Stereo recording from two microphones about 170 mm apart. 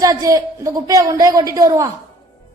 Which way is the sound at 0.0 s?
20° right (ahead or behind).